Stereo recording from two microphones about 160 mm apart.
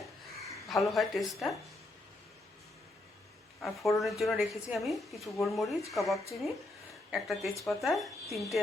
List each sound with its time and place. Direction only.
0.7 s a woman's voice: centre (ahead or behind)
3.6 s a woman's voice: centre (ahead or behind)